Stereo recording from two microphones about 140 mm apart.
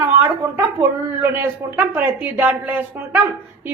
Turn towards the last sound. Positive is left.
turn(degrees=-15)  # may be behind; listen again after turning